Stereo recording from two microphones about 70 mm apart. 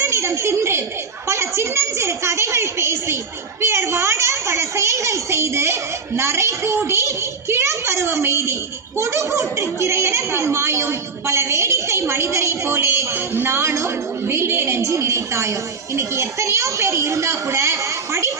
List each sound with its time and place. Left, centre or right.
0.0 s a child's voice: right
3.6 s a sound: right
9.0 s a child's voice: right